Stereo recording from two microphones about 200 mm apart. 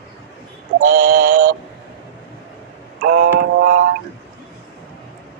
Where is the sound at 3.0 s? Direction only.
55° right (ahead or behind).